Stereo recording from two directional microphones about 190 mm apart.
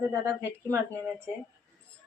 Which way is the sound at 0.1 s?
15° right (ahead or behind).